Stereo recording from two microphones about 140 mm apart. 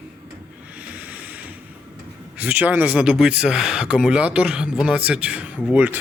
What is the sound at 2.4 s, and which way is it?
Speech, 10° right (ahead or behind).